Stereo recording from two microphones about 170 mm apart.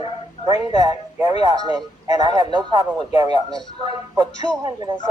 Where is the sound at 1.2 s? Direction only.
25° right (ahead or behind).